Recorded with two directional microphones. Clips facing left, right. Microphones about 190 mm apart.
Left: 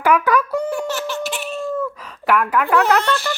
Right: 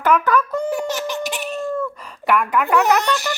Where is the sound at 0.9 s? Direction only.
15° right (ahead or behind).